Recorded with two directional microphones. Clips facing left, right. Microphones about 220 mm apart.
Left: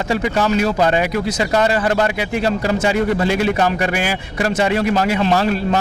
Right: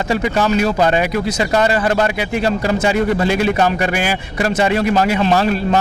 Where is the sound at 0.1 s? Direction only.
20° right (ahead or behind).